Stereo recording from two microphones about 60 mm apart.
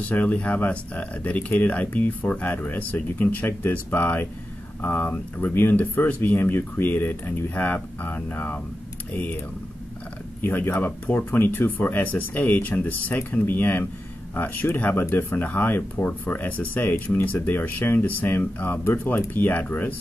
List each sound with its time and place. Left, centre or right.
0.0 s speech: left
10.4 s speech: left